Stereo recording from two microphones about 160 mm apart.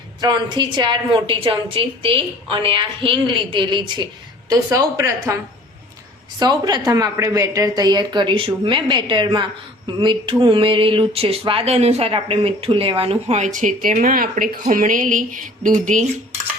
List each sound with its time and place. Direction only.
0.2 s a woman's voice: 30° right (ahead or behind)
6.4 s a woman's voice: 25° right (ahead or behind); by 16.0 s 55° right (ahead or behind)